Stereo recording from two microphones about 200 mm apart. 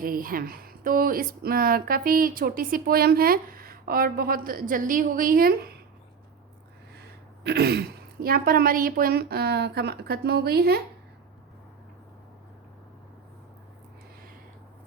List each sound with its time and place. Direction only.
0.0 s speech: 45° right (ahead or behind)
7.4 s speech: 55° right (ahead or behind)